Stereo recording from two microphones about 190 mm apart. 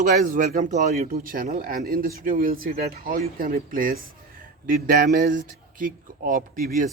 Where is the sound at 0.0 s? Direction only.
45° right (ahead or behind).